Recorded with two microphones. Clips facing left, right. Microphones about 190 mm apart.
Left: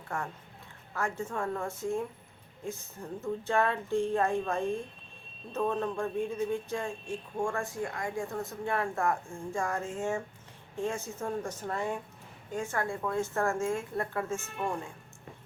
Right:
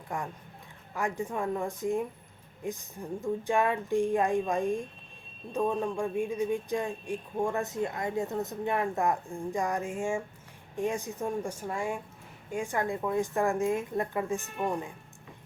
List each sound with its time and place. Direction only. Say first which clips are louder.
0.1 s speech: right 1 dB; 15° right (ahead or behind)